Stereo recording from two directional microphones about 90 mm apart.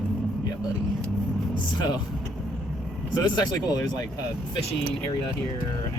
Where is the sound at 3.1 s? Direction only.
50° left (ahead or behind).